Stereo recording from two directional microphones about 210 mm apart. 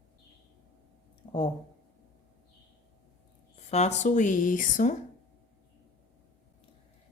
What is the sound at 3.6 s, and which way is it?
A woman's voice, 30° left (ahead or behind).